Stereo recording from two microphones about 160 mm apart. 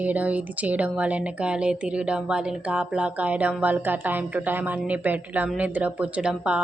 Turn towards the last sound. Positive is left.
turn(degrees=-5)  # may be behind; listen again after turning